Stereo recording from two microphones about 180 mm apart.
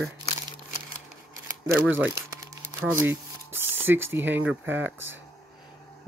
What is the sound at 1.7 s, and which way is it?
Crumpling, 10° right (ahead or behind).